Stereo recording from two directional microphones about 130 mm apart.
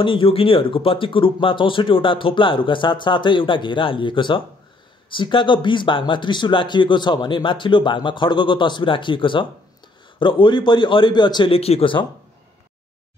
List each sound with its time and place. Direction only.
0.0 s speech: 40° left (ahead or behind)